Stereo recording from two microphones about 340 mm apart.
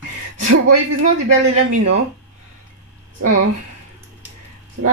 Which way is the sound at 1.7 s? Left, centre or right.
Right.